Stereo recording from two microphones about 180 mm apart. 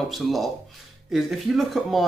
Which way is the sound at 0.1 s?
Centre (ahead or behind).